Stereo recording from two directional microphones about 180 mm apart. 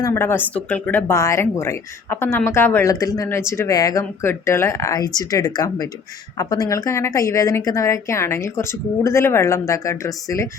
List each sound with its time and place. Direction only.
0.0 s speech: 15° left (ahead or behind)